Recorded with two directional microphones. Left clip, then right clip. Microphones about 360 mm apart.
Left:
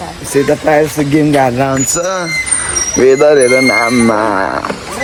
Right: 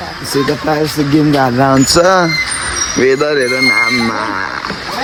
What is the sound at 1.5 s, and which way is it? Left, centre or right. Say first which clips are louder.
Speech: right 4 dB; right.